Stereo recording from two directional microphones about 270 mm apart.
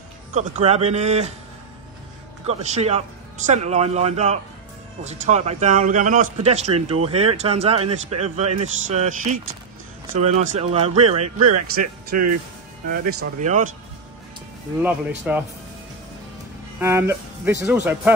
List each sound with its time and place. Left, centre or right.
0.3 s speech: right
2.4 s speech: right
11.1 s speech: right
13.2 s speech: right
14.8 s speech: centre
16.8 s speech: centre